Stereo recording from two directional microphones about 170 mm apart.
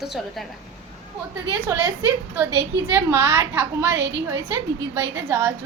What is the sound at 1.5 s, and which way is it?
Speech, 15° right (ahead or behind).